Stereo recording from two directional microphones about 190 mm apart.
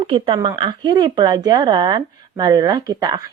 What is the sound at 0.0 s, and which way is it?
A woman's voice, 30° right (ahead or behind).